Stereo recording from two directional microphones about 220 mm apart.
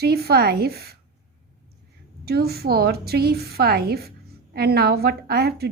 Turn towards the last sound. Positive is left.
turn(degrees=-45)  # may be behind; listen again after turning